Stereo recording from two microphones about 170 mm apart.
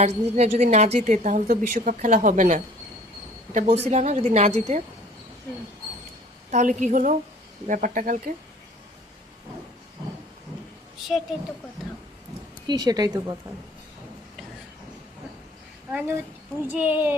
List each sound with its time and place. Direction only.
0.0 s a woman's voice: 40° right (ahead or behind)
6.5 s a woman's voice: 45° right (ahead or behind)
12.6 s a woman's voice: 25° right (ahead or behind)
15.9 s speech: 10° right (ahead or behind)